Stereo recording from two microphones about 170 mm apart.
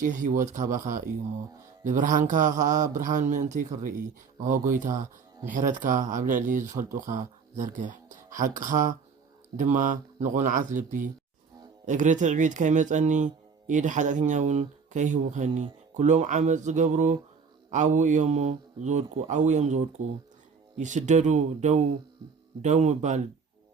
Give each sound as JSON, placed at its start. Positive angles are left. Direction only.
{"t": 0.0, "sound": "speech", "side_deg": -45}